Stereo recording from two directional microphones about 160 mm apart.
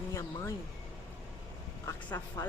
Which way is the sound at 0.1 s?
20° left (ahead or behind).